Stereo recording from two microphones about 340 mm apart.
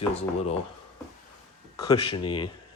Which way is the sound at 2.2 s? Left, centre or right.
Centre.